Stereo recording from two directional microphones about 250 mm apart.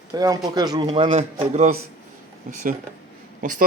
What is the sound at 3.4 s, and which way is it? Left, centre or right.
Speech, right.